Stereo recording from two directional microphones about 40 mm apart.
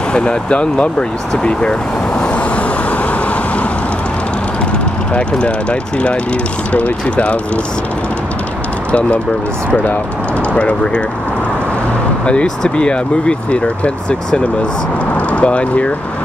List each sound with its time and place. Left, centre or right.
0.1 s speech: left
5.1 s speech: left
10.6 s speech: left
12.3 s speech: left